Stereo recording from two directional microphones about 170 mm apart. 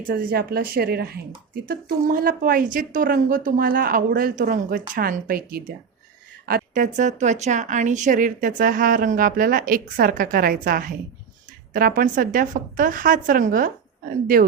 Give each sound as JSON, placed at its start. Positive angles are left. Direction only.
{"t": 0.1, "sound": "a woman's voice", "side_deg": -65}